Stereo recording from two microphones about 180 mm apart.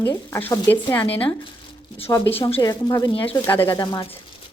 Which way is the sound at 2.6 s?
20° left (ahead or behind).